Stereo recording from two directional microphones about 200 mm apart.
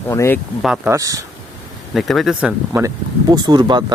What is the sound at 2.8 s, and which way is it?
A man's voice, 20° right (ahead or behind).